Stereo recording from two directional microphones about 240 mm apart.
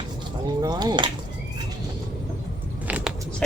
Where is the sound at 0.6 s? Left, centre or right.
Centre.